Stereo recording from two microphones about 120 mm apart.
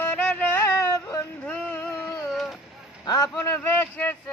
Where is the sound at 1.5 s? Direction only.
15° left (ahead or behind).